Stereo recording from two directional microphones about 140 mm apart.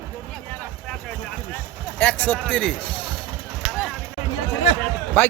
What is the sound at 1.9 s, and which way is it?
Speech, 10° left (ahead or behind).